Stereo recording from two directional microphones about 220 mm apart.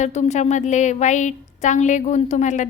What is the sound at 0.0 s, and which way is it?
A woman's voice, 30° left (ahead or behind).